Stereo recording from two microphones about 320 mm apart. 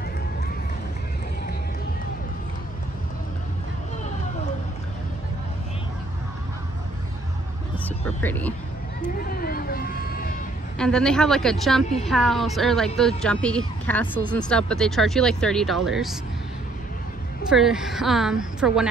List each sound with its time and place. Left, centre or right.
7.8 s speech: centre
9.2 s vehicle: left
10.8 s speech: centre
17.5 s speech: centre